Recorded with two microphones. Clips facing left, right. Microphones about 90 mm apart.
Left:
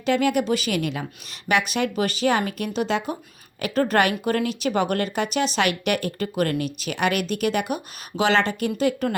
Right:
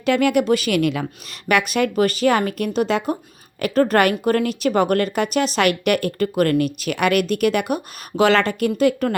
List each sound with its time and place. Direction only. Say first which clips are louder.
0.0 s speech: right 4 dB; 60° right (ahead or behind)